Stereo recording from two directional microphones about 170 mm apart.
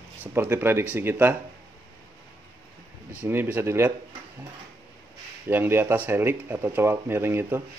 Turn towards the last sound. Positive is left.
turn(degrees=-15)  # may be behind; listen again after turning